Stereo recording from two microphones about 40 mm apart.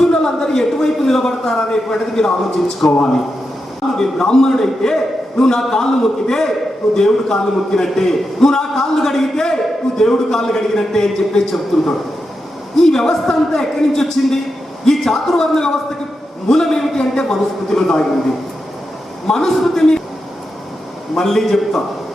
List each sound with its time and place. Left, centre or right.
0.1 s a man's voice: centre
3.9 s a man's voice: centre
19.3 s a man's voice: centre
21.2 s a man's voice: centre